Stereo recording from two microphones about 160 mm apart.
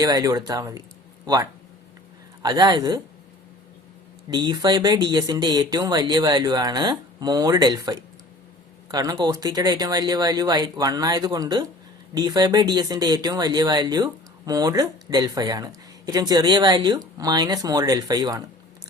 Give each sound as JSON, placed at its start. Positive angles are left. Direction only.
{"t": 0.0, "sound": "speech", "side_deg": -25}
{"t": 2.4, "sound": "speech", "side_deg": -25}
{"t": 4.3, "sound": "speech", "side_deg": -25}